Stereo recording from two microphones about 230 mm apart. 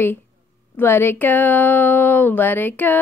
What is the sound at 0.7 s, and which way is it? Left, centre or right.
Speech, centre.